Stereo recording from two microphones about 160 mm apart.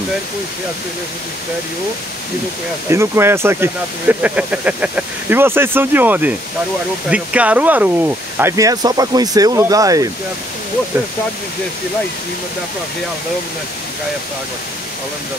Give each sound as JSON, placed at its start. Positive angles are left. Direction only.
{"t": 2.9, "sound": "speech", "side_deg": -15}